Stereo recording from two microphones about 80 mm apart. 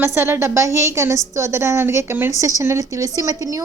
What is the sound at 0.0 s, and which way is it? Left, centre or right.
A woman's voice, right.